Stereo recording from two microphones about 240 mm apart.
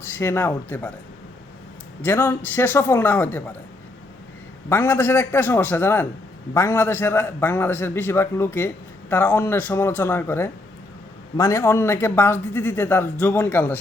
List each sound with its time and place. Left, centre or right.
0.2 s a man's voice: centre
2.0 s a man's voice: centre
4.7 s a man's voice: centre